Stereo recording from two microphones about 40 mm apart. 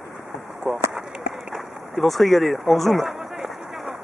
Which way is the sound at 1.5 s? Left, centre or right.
Centre.